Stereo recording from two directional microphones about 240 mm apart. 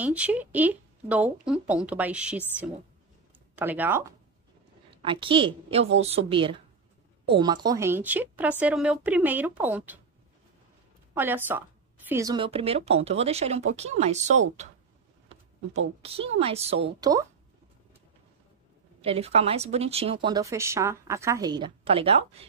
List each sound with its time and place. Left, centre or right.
0.0 s speech: centre
3.5 s speech: centre
5.0 s speech: right
11.1 s speech: centre; by 14.4 s right
16.0 s speech: right
18.9 s speech: right